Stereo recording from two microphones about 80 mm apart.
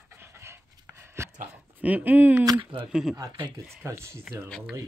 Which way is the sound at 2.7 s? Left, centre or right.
Right.